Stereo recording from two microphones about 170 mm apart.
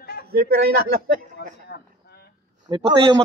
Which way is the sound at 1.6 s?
65° left (ahead or behind).